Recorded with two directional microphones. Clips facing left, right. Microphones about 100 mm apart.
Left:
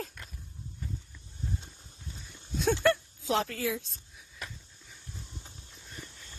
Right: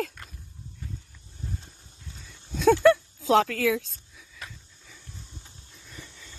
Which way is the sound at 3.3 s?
90° right.